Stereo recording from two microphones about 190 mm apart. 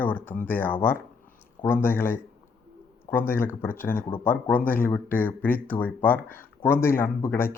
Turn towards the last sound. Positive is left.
turn(degrees=10)  # may be behind; listen again after turning